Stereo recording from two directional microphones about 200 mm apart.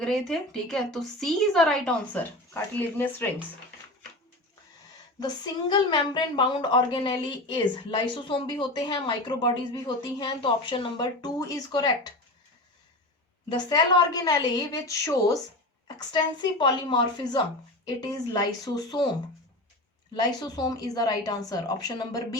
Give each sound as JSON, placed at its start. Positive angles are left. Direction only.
{"t": 0.0, "sound": "a woman's voice", "side_deg": 0}
{"t": 5.2, "sound": "a woman's voice", "side_deg": 20}
{"t": 13.5, "sound": "a woman's voice", "side_deg": 20}
{"t": 18.6, "sound": "a woman's voice", "side_deg": 20}
{"t": 20.1, "sound": "a woman's voice", "side_deg": 20}